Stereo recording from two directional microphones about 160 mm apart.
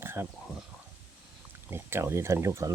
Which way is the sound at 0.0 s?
15° right (ahead or behind).